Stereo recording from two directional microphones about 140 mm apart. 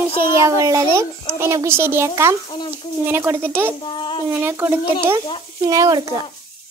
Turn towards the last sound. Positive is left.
turn(degrees=-25)  # may be behind; listen again after turning